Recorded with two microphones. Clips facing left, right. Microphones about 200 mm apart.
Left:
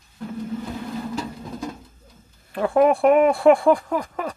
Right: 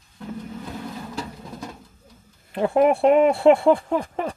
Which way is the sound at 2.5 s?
20° right (ahead or behind).